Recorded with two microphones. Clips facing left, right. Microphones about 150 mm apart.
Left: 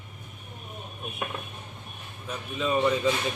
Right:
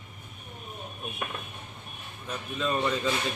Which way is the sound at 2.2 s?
5° left (ahead or behind).